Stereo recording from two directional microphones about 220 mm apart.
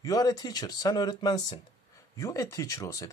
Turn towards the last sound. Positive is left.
turn(degrees=15)  # may be behind; listen again after turning